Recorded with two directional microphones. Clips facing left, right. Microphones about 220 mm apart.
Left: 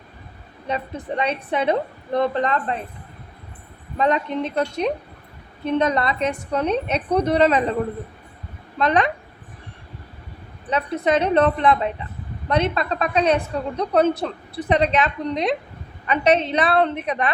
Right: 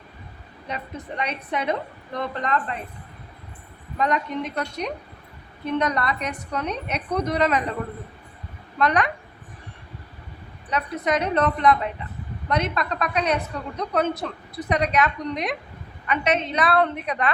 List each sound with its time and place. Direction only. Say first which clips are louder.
0.7 s a woman's voice: left 6 dB; 30° left (ahead or behind)
3.9 s a woman's voice: left 4 dB; 30° left (ahead or behind)
8.8 s a woman's voice: left 2 dB; 25° left (ahead or behind)
10.7 s a woman's voice: left 4 dB; 30° left (ahead or behind)